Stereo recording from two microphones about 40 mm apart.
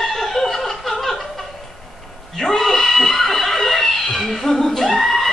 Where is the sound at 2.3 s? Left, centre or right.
Centre.